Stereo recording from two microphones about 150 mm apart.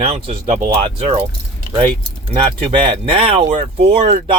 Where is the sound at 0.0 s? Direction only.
40° right (ahead or behind).